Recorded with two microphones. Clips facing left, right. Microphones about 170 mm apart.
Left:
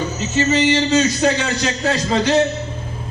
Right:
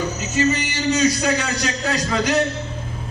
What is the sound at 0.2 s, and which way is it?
A man's voice, 25° left (ahead or behind).